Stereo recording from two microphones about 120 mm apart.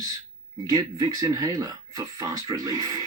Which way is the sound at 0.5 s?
35° right (ahead or behind).